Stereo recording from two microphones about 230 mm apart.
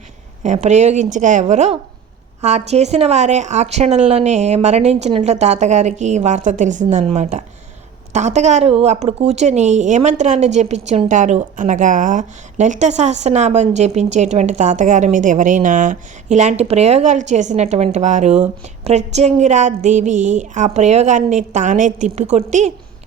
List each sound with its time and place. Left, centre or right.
0.4 s a woman's voice: right